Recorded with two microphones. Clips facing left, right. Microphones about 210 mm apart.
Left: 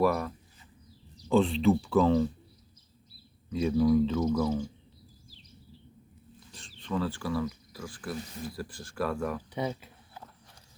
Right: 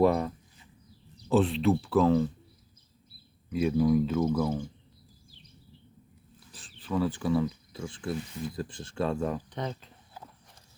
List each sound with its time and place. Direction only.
0.0 s speech: 25° right (ahead or behind)
1.3 s speech: 5° right (ahead or behind)
3.5 s speech: 5° right (ahead or behind)
6.5 s a sound: 5° right (ahead or behind)
7.1 s speech: 20° right (ahead or behind)
9.5 s speech: 10° left (ahead or behind)